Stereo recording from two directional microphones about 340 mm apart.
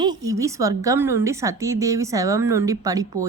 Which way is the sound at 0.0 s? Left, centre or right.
Centre.